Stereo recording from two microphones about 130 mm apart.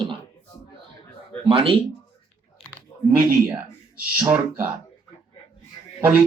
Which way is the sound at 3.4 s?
15° right (ahead or behind).